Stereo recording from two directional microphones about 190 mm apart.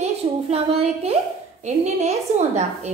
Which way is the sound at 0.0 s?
30° right (ahead or behind).